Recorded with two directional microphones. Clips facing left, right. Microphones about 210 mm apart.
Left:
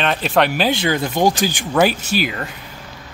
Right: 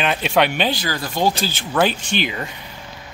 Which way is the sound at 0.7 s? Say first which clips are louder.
Left 6 dB; 25° left (ahead or behind).